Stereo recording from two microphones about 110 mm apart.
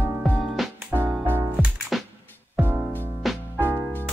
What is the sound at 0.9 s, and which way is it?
Music, 15° right (ahead or behind).